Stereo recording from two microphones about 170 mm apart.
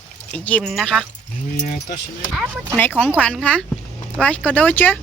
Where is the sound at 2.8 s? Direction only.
10° left (ahead or behind).